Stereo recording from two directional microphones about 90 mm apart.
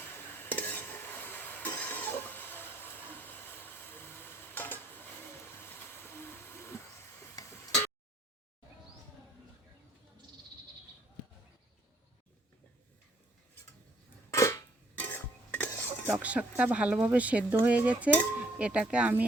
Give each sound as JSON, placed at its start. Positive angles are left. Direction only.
{"t": 0.0, "sound": "stir", "side_deg": 25}
{"t": 5.5, "sound": "train", "side_deg": 25}
{"t": 7.5, "sound": "a sound", "side_deg": 35}
{"t": 14.3, "sound": "cap gun", "side_deg": 35}
{"t": 14.9, "sound": "stir", "side_deg": 20}
{"t": 15.7, "sound": "cutlery", "side_deg": 25}
{"t": 16.0, "sound": "speech", "side_deg": -15}